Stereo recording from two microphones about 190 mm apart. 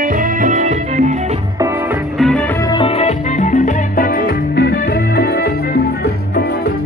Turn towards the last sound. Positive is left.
turn(degrees=55)  # may be behind; listen again after turning